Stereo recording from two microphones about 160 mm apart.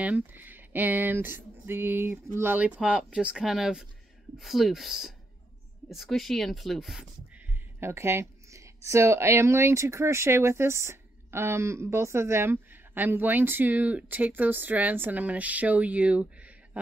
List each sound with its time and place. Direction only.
0.0 s a woman's voice: 10° right (ahead or behind)
7.8 s a woman's voice: 15° right (ahead or behind)